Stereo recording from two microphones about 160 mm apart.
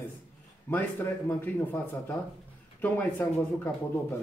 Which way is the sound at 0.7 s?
15° left (ahead or behind).